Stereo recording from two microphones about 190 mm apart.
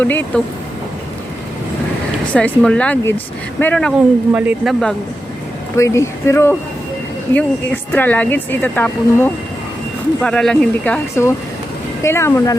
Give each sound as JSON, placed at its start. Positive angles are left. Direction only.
{"t": 0.0, "sound": "a woman's voice", "side_deg": 10}
{"t": 2.3, "sound": "a woman's voice", "side_deg": 5}
{"t": 4.3, "sound": "speech", "side_deg": -10}
{"t": 5.7, "sound": "a woman's voice", "side_deg": 15}